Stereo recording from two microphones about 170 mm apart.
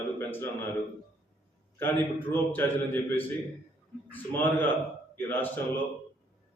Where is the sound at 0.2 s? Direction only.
10° left (ahead or behind).